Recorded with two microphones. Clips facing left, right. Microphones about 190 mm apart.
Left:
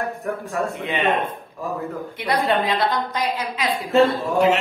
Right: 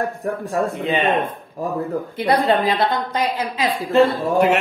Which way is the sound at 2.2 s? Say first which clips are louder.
Right 3 dB; 30° right (ahead or behind).